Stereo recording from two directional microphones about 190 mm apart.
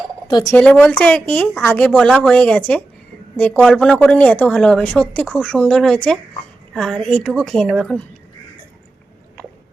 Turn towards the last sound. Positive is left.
turn(degrees=5)  # may be behind; listen again after turning